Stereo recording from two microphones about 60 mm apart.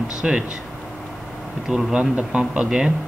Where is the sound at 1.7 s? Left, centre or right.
Centre.